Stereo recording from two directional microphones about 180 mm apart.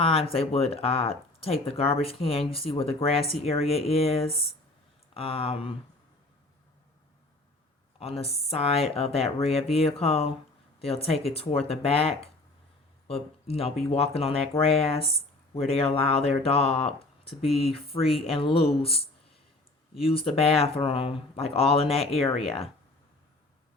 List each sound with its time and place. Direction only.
0.0 s speech: 35° left (ahead or behind)
7.9 s speech: 35° left (ahead or behind)
20.1 s speech: 30° left (ahead or behind)